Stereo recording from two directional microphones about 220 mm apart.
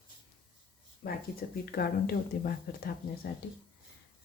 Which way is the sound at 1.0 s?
45° left (ahead or behind).